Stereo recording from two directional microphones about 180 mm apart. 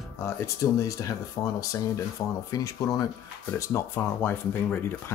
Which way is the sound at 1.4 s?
25° left (ahead or behind).